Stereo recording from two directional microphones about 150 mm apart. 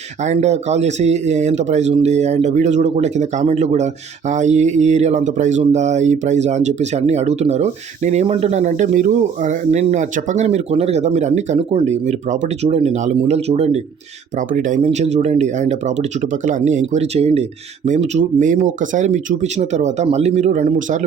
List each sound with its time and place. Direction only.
0.2 s speech: 50° right (ahead or behind)
14.3 s speech: 60° right (ahead or behind)
14.9 s speech: 50° right (ahead or behind)